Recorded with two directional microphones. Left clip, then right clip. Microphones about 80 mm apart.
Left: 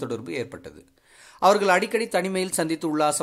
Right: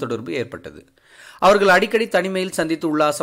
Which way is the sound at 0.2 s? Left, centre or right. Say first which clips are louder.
Right 5 dB; centre.